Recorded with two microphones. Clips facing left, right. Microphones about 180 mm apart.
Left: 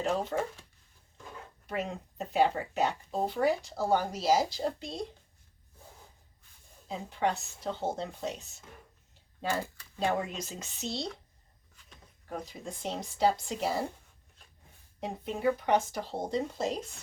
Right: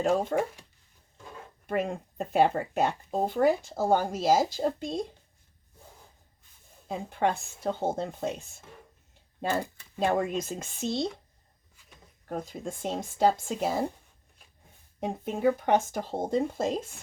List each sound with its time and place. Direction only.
0.3 s speech: 50° right (ahead or behind)
1.6 s speech: 50° right (ahead or behind)
6.8 s speech: 50° right (ahead or behind)
10.0 s speech: 50° right (ahead or behind)
12.3 s speech: 50° right (ahead or behind)
15.0 s speech: 50° right (ahead or behind)